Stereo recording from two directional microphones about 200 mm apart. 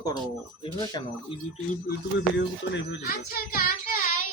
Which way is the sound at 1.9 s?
60° left (ahead or behind).